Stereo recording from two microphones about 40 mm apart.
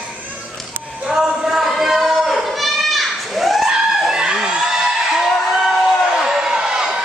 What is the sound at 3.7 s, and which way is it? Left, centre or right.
Screaming, centre.